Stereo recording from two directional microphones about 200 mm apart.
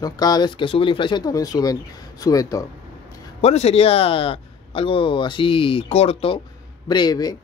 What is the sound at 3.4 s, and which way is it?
Speech, 30° left (ahead or behind).